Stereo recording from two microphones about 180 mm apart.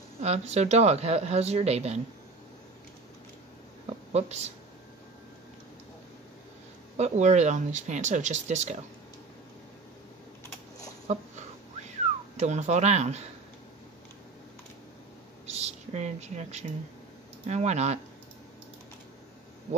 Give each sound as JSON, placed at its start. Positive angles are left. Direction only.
{"t": 0.2, "sound": "speech", "side_deg": -35}
{"t": 3.9, "sound": "a sound", "side_deg": -35}
{"t": 7.0, "sound": "speech", "side_deg": -40}
{"t": 11.1, "sound": "speech", "side_deg": -40}
{"t": 12.4, "sound": "speech", "side_deg": -40}
{"t": 15.4, "sound": "speech", "side_deg": -40}